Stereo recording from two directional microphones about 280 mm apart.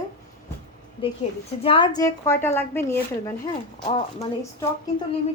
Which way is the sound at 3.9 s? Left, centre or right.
Left.